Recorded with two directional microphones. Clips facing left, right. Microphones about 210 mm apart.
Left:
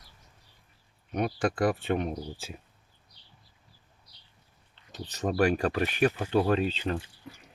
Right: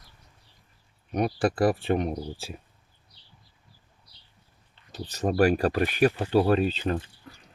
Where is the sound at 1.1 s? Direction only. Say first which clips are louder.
Right 3 dB; 35° right (ahead or behind).